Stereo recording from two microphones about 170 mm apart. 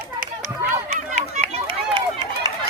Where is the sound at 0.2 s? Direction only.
50° right (ahead or behind).